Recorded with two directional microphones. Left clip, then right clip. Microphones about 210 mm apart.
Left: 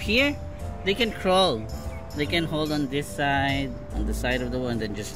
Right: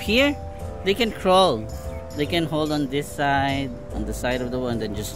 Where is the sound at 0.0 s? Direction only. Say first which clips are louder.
Right 3 dB; 25° right (ahead or behind).